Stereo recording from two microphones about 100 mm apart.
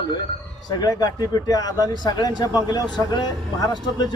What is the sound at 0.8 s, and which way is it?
Speech, 40° left (ahead or behind).